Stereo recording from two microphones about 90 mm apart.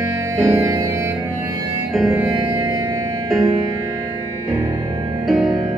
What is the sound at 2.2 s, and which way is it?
Music, 55° right (ahead or behind).